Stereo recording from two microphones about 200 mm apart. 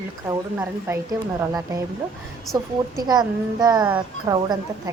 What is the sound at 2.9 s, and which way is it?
A child's voice, 20° right (ahead or behind).